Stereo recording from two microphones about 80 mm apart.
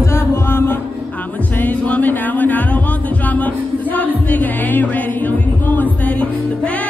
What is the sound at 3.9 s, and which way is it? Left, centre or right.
Music, left.